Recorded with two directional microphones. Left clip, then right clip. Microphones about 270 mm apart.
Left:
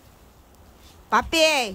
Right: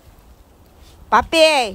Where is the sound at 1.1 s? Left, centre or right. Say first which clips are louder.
Right 6 dB; centre.